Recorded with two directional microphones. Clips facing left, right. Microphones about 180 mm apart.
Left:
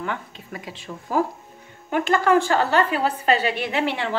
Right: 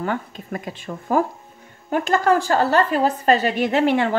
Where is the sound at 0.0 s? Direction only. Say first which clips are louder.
Right 5 dB; 45° right (ahead or behind).